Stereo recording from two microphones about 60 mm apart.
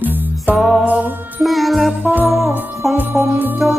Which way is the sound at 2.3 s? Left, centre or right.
Right.